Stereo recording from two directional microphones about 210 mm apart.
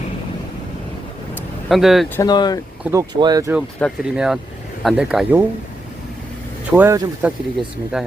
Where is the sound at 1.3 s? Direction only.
Centre (ahead or behind).